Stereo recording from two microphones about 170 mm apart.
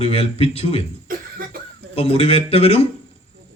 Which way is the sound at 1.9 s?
35° left (ahead or behind).